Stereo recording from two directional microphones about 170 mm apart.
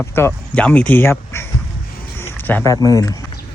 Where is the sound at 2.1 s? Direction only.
15° left (ahead or behind).